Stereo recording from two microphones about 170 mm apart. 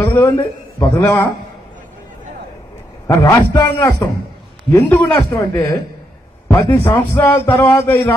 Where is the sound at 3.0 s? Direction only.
20° left (ahead or behind).